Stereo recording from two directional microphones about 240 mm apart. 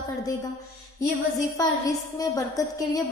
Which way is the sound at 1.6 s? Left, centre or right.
Centre.